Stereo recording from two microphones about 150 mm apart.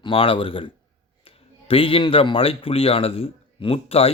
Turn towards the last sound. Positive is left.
turn(degrees=40)  # may be behind; listen again after turning